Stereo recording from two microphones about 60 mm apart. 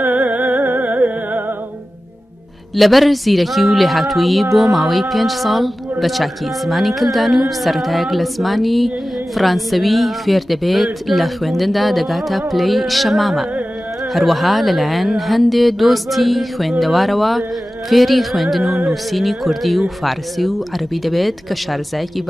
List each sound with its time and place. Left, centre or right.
0.0 s music: right
2.7 s a woman's voice: centre